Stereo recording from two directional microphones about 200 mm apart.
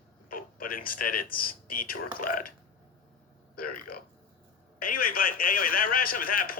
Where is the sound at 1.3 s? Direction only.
45° left (ahead or behind).